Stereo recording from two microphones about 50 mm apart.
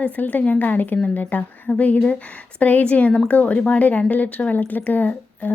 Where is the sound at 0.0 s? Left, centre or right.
Left.